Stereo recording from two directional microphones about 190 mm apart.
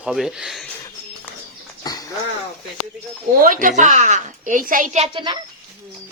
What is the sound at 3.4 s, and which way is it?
A child's voice, 45° right (ahead or behind).